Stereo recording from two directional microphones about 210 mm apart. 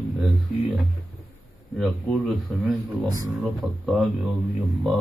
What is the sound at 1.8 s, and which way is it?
A man's voice, centre (ahead or behind).